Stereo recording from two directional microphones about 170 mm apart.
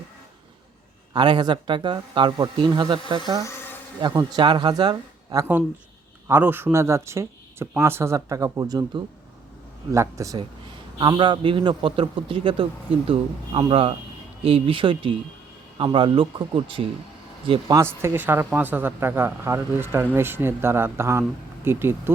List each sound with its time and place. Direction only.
1.1 s speech: 25° right (ahead or behind)
3.4 s a sound: 15° left (ahead or behind)
4.0 s speech: 20° right (ahead or behind)
9.9 s speech: 20° right (ahead or behind)
17.5 s speech: 20° right (ahead or behind)